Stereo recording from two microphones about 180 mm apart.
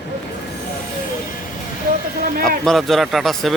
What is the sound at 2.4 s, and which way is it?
Speech, centre (ahead or behind).